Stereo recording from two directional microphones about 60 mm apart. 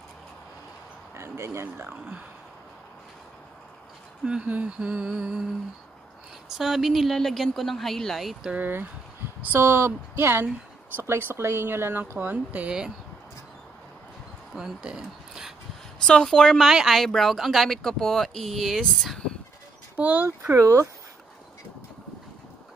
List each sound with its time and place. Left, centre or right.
1.1 s speech: right
1.9 s humming: right
4.2 s speech: centre
4.5 s humming: right
6.6 s speech: centre
8.5 s speech: right
12.3 s humming: right
14.5 s speech: centre
16.1 s a woman's voice: centre
16.6 s speech: centre
20.0 s humming: right
20.5 s speech: right